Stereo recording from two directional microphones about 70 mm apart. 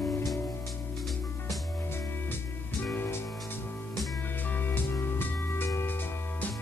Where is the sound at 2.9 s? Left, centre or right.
Left.